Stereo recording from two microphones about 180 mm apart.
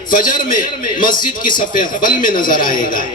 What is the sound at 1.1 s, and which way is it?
Speech, 25° left (ahead or behind).